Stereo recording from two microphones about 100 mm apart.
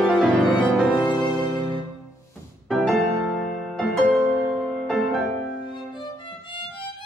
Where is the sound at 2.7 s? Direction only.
5° left (ahead or behind).